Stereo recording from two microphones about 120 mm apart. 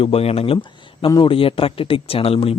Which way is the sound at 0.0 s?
55° left (ahead or behind).